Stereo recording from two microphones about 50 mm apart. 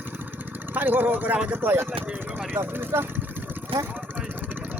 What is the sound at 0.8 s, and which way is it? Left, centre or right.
Speech, right.